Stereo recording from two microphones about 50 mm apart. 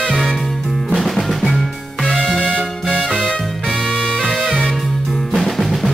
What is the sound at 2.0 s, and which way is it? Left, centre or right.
Music, centre.